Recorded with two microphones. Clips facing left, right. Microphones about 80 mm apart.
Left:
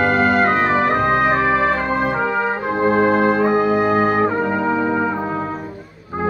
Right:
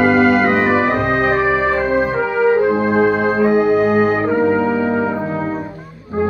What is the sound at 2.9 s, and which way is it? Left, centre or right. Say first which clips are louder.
Music: left 2 dB; left.